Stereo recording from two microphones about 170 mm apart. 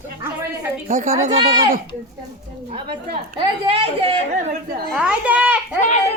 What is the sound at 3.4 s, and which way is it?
Speech, 35° right (ahead or behind).